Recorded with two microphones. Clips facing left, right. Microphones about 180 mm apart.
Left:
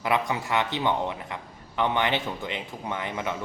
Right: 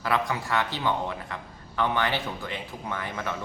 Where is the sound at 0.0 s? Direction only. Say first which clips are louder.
Left 1 dB; 20° left (ahead or behind).